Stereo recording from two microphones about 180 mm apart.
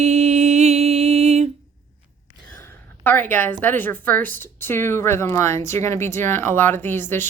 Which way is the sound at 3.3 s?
10° left (ahead or behind).